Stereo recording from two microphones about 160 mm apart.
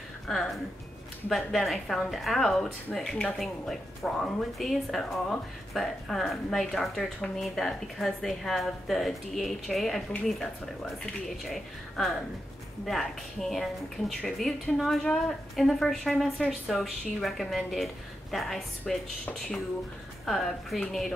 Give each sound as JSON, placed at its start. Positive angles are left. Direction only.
{"t": 1.3, "sound": "a woman's voice", "side_deg": 0}